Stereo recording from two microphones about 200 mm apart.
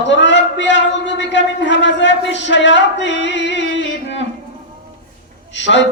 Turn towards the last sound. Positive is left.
turn(degrees=65)  # may be behind; listen again after turning